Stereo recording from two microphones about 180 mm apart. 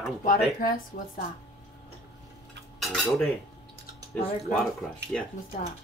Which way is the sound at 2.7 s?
Centre (ahead or behind).